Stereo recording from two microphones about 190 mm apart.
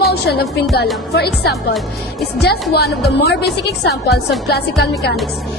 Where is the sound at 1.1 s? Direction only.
60° left (ahead or behind).